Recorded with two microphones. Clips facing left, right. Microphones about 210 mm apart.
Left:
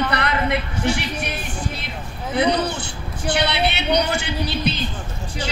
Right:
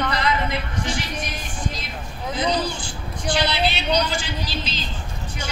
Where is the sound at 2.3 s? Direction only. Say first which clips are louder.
Left 4 dB; 65° left (ahead or behind).